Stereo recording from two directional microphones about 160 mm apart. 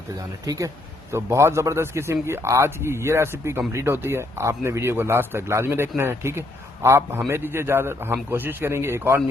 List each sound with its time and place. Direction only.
0.4 s a man's voice: 20° right (ahead or behind)